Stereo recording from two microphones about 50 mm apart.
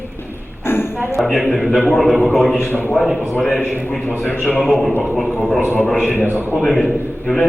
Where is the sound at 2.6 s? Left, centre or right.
Left.